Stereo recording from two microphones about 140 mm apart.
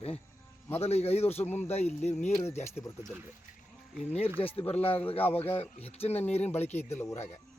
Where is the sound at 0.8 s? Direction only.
50° left (ahead or behind).